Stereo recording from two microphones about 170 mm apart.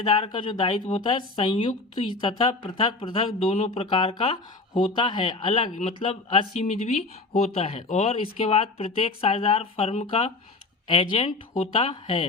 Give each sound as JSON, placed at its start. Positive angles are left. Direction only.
{"t": 0.0, "sound": "speech", "side_deg": 30}